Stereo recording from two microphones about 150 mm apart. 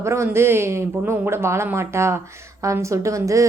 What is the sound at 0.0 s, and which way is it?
A woman's voice, 20° right (ahead or behind).